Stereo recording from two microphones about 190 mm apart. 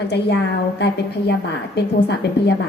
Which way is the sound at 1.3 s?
60° left (ahead or behind).